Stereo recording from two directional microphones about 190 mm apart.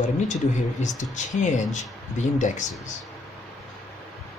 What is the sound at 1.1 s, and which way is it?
Speech, 40° left (ahead or behind).